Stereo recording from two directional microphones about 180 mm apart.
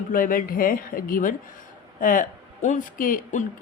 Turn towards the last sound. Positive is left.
turn(degrees=45)  # may be behind; listen again after turning